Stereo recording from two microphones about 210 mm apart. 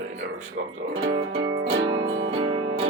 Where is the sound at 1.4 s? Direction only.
55° right (ahead or behind).